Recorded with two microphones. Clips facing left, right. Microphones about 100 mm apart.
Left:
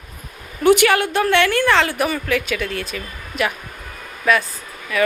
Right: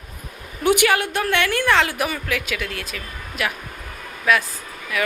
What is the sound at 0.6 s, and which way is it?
A woman's voice, 10° right (ahead or behind).